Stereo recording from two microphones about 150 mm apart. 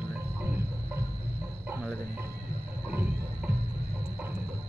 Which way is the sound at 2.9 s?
10° right (ahead or behind).